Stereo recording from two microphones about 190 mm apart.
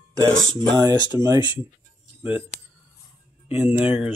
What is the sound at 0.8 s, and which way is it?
Speech, 20° right (ahead or behind).